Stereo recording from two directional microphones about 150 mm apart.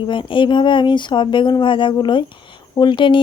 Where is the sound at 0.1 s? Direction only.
35° left (ahead or behind).